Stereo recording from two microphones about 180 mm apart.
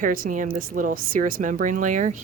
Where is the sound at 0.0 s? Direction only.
50° right (ahead or behind).